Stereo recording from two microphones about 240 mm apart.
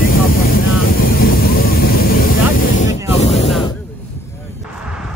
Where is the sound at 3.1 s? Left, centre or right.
Left.